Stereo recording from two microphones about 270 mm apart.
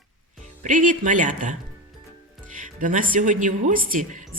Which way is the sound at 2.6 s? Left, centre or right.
Right.